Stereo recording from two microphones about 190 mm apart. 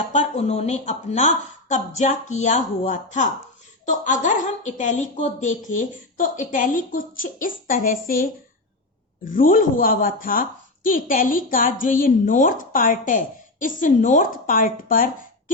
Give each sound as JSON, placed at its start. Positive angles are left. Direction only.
{"t": 0.1, "sound": "a woman's voice", "side_deg": 35}